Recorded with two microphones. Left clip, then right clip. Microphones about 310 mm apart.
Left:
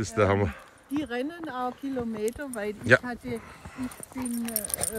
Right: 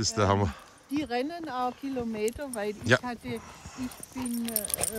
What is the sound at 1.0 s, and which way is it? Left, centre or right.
Speech, right.